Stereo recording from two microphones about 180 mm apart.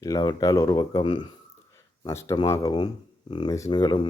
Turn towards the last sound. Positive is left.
turn(degrees=25)  # may be behind; listen again after turning